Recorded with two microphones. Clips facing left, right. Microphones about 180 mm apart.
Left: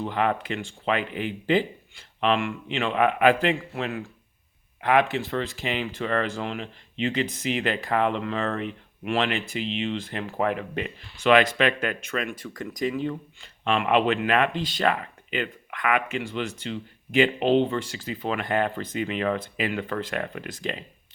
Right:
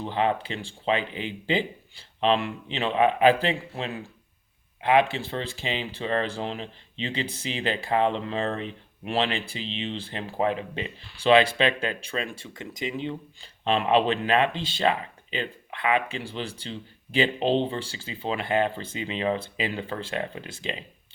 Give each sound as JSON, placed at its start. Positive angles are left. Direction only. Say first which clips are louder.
{"t": 0.0, "sound": "speech", "louder": "even", "side_deg": -25}